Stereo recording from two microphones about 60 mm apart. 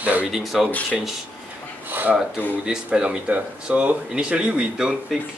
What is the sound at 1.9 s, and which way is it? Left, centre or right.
Speech, right.